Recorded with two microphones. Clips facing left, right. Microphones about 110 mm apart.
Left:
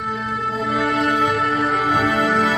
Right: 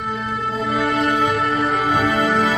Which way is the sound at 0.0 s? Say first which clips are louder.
Even; centre (ahead or behind).